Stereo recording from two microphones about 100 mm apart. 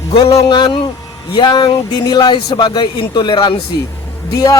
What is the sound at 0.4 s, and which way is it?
Speech, 50° left (ahead or behind).